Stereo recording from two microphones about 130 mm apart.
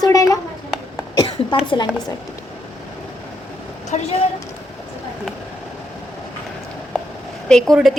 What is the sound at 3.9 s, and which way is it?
Speech, 65° left (ahead or behind).